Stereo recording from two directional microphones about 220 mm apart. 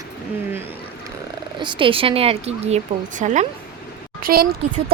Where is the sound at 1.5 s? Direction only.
20° right (ahead or behind).